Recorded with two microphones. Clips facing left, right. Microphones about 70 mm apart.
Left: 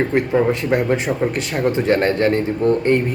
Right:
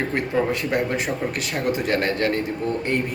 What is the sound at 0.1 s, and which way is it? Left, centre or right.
Speech, left.